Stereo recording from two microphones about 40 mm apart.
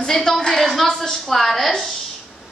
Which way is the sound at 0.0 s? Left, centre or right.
Centre.